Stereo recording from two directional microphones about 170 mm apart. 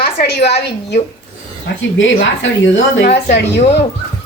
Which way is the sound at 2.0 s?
90° left.